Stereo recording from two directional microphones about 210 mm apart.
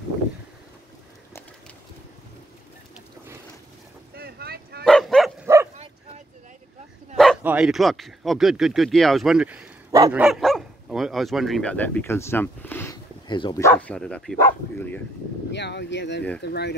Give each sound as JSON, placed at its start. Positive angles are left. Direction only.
{"t": 4.1, "sound": "boat", "side_deg": -45}
{"t": 4.8, "sound": "bow-wow", "side_deg": 0}
{"t": 7.2, "sound": "speech", "side_deg": 0}
{"t": 10.2, "sound": "speech", "side_deg": 0}
{"t": 15.5, "sound": "speech", "side_deg": 55}